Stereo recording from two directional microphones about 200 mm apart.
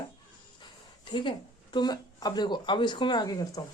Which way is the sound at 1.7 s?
20° left (ahead or behind).